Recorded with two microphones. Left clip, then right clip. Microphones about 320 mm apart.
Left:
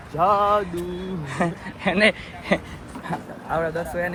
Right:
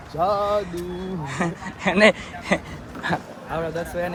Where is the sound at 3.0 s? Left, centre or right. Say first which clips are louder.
Right 5 dB; right.